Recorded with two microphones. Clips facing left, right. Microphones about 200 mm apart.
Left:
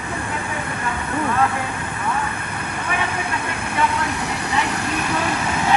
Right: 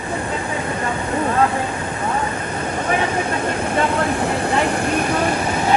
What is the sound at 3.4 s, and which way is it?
Speech, 55° right (ahead or behind).